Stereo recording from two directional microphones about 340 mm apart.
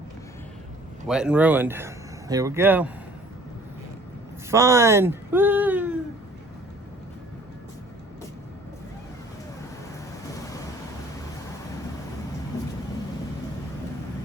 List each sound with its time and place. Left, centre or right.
1.0 s speech: centre
4.5 s speech: centre